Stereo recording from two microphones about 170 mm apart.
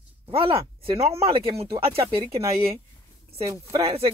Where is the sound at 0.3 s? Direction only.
35° right (ahead or behind).